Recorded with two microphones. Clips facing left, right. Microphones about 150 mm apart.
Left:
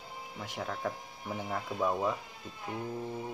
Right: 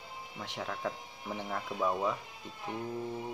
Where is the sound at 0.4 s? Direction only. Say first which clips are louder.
Left 1 dB; centre (ahead or behind).